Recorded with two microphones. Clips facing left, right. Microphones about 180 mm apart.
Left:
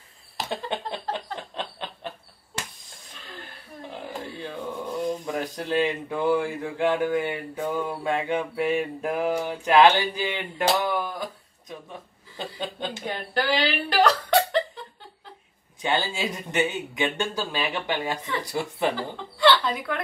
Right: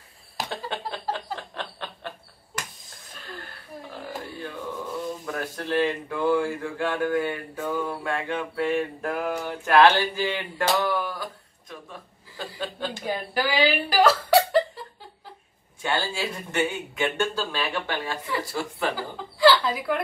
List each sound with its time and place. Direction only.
0.7 s a sound: 20° left (ahead or behind)
1.1 s chuckle: 20° left (ahead or behind)
4.4 s speech: 25° left (ahead or behind)
11.7 s a sound: 20° left (ahead or behind)
12.5 s chuckle: 20° left (ahead or behind)
13.0 s chuckle: 10° right (ahead or behind)
15.8 s speech: 20° left (ahead or behind)
18.9 s speech: centre (ahead or behind)